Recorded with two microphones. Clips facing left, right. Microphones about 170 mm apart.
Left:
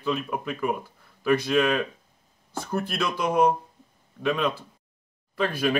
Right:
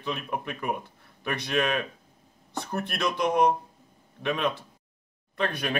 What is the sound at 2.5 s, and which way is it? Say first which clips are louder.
Speech: left 3 dB; centre (ahead or behind).